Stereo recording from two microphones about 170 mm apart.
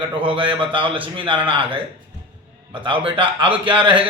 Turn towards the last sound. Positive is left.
turn(degrees=-30)  # may be behind; listen again after turning